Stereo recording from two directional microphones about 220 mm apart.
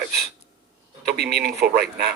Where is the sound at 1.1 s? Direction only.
45° right (ahead or behind).